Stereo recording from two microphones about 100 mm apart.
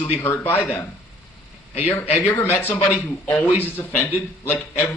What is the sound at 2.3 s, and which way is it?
A man's voice, 20° left (ahead or behind).